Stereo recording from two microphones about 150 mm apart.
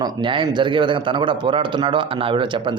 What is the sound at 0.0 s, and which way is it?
A man's voice, 30° right (ahead or behind).